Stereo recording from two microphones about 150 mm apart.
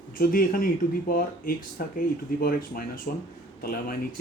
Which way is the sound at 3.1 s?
65° left (ahead or behind).